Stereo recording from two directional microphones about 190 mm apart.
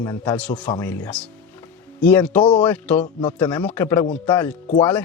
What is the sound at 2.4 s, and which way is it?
Speech, 25° left (ahead or behind).